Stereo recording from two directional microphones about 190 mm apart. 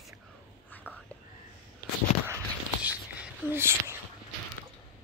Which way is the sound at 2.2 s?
10° right (ahead or behind).